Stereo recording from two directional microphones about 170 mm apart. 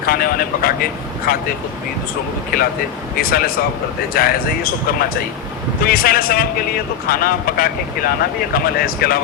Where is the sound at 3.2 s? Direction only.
60° left (ahead or behind).